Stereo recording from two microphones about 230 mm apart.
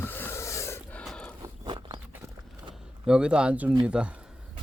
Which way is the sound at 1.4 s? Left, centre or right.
Centre.